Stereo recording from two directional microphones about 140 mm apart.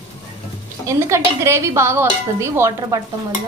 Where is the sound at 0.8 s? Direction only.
20° right (ahead or behind).